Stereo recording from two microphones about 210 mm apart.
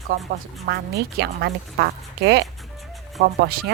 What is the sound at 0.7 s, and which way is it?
A woman's voice, 50° right (ahead or behind).